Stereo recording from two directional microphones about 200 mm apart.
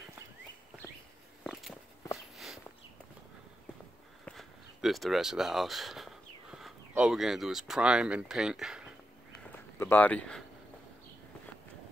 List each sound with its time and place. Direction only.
1.4 s walk: centre (ahead or behind)
4.3 s a sound: centre (ahead or behind)
6.9 s speech: 5° right (ahead or behind)
9.8 s speech: 10° left (ahead or behind)